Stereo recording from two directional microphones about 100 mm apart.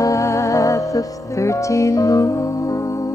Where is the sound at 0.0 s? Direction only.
30° left (ahead or behind).